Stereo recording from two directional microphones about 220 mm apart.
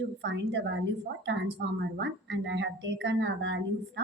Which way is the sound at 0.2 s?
50° right (ahead or behind).